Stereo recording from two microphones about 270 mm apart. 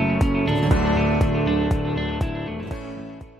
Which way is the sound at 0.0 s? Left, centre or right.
Centre.